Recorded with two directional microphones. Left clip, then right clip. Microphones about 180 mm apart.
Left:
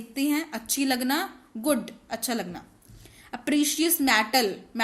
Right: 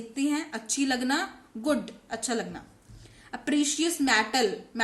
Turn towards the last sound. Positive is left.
turn(degrees=45)  # may be behind; listen again after turning